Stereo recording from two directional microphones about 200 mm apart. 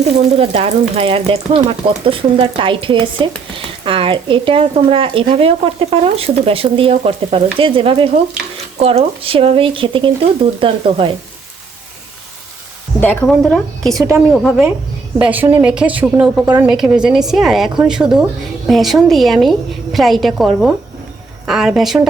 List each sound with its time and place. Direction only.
0.0 s speech: 30° right (ahead or behind)
13.0 s a woman's voice: 5° left (ahead or behind)